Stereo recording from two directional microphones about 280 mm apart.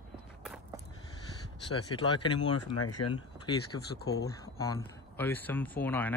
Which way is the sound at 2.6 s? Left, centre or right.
Left.